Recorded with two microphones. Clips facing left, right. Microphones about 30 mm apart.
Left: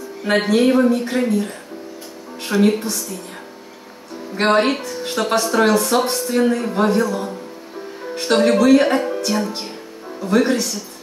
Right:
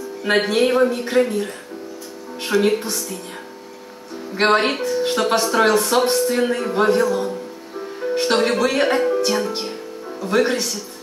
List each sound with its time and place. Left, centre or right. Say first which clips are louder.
0.6 s speech: left 2 dB; centre
2.5 s a woman's voice: left 1 dB; centre
4.4 s speech: left 1 dB; centre
9.3 s speech: right 1 dB; centre